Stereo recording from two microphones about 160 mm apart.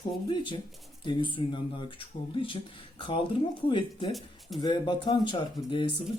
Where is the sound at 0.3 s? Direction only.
30° left (ahead or behind).